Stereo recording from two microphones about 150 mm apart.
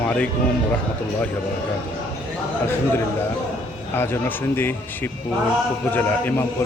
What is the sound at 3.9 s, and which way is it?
Speech, 15° left (ahead or behind).